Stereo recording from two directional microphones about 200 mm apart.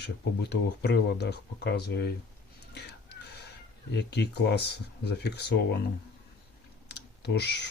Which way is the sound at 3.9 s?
55° left (ahead or behind).